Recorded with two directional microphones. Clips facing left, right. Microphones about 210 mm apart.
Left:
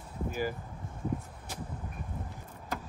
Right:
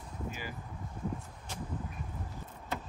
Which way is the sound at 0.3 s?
45° left (ahead or behind).